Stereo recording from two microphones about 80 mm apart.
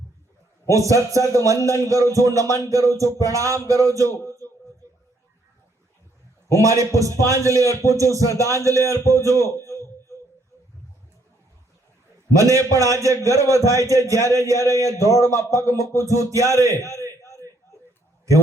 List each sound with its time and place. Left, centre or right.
0.7 s a man's voice: right
6.5 s a man's voice: right
7.6 s a man's voice: left
7.9 s a man's voice: right
9.6 s a sound: left
12.3 s a man's voice: right
16.7 s a man's voice: left